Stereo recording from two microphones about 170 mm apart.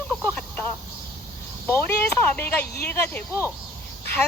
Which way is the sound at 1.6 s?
15° left (ahead or behind).